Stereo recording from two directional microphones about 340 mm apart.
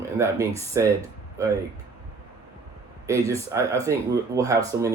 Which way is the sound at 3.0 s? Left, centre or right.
Centre.